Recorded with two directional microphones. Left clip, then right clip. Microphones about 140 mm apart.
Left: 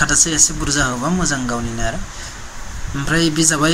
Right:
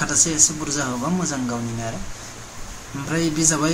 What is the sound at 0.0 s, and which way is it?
A woman's voice, 15° left (ahead or behind).